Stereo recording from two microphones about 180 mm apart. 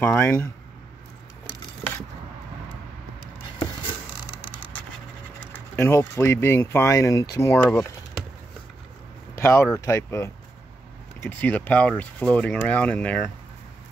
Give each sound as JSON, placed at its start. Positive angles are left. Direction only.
{"t": 0.0, "sound": "speech", "side_deg": 10}
{"t": 5.5, "sound": "speech", "side_deg": 15}
{"t": 9.4, "sound": "speech", "side_deg": 15}